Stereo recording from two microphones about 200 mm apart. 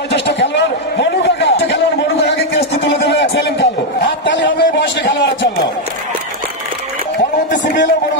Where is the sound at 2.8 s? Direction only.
60° left (ahead or behind).